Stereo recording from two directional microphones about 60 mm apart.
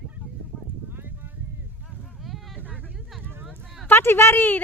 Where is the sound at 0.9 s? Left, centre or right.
Right.